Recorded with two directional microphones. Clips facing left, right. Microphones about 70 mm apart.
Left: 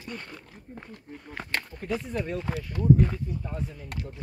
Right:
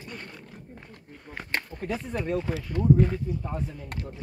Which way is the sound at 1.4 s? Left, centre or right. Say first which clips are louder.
Right 3 dB; right.